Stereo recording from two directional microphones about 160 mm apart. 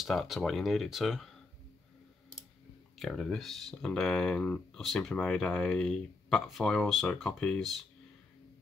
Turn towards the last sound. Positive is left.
turn(degrees=0)  # may be behind; listen again after turning